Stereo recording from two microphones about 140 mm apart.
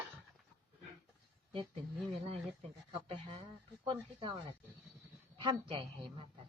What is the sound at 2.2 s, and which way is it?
Speech, 45° right (ahead or behind).